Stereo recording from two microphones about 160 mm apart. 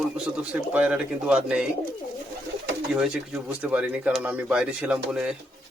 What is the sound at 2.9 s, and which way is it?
Speech, 5° right (ahead or behind).